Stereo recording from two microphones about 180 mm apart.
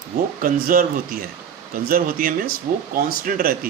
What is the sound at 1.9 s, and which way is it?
Speech, 55° right (ahead or behind).